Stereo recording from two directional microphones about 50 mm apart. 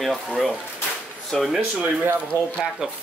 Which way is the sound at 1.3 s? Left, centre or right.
Centre.